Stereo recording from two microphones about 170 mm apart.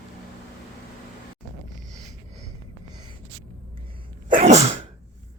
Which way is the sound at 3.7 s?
30° right (ahead or behind).